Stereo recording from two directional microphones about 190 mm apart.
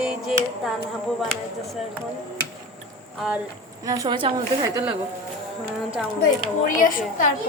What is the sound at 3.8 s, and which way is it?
A woman's voice, 20° right (ahead or behind).